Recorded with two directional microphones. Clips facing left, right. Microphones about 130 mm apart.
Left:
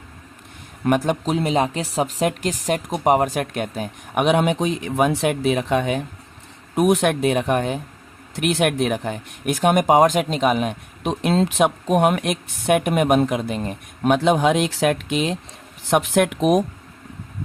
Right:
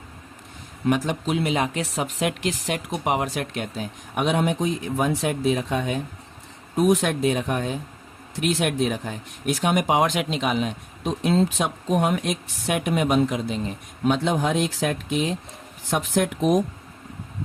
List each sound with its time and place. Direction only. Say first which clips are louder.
0.9 s speech: left 4 dB; 55° left (ahead or behind)
1.2 s speech: left 3 dB; 40° left (ahead or behind); by 15.4 s 85° left
15.9 s speech: left 5 dB; 70° left (ahead or behind)